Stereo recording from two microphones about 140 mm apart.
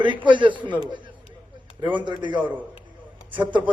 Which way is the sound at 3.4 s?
35° right (ahead or behind).